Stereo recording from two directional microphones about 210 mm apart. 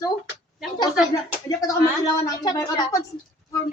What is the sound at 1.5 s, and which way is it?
A woman's voice, 15° left (ahead or behind).